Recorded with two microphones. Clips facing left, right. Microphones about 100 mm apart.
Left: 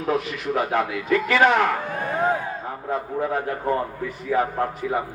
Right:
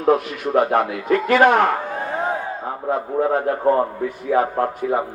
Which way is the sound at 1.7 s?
20° right (ahead or behind).